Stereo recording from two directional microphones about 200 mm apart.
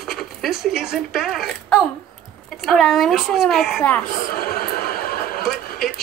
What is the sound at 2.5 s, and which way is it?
Speech, centre (ahead or behind).